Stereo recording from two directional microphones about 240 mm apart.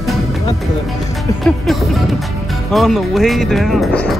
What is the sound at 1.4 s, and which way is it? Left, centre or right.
Speech, centre.